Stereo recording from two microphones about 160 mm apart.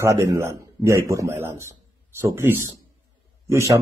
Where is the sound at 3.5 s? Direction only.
20° right (ahead or behind).